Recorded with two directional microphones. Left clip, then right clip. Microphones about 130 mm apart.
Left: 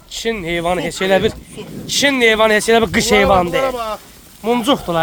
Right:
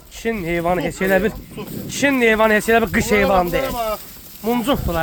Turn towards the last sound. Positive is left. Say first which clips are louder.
# left 4 dB
turn(degrees=45)  # may be behind; listen again after turning